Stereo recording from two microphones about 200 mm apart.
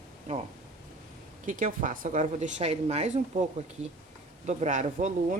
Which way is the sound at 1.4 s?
40° right (ahead or behind).